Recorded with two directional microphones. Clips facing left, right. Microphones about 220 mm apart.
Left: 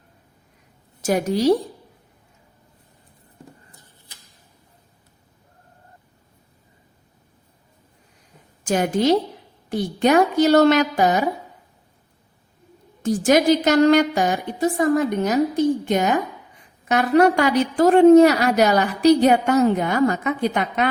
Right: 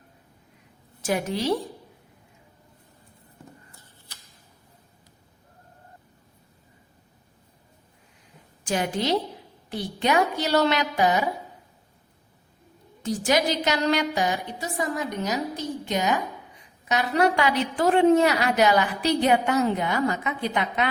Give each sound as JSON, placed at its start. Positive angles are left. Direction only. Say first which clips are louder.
{"t": 1.0, "sound": "a woman's voice", "louder": "left 7 dB", "side_deg": 40}
{"t": 3.7, "sound": "a sound", "louder": "left 1 dB", "side_deg": 20}
{"t": 8.6, "sound": "a woman's voice", "louder": "left 7 dB", "side_deg": 45}
{"t": 13.0, "sound": "a woman's voice", "louder": "left 6 dB", "side_deg": 50}